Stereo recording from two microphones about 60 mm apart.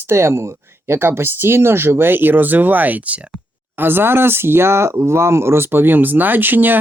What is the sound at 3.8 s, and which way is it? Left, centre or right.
Speech, right.